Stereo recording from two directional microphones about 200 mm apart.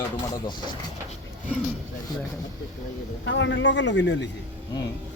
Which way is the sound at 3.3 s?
70° left (ahead or behind).